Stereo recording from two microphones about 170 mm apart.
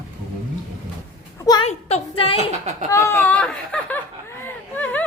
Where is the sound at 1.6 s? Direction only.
35° left (ahead or behind).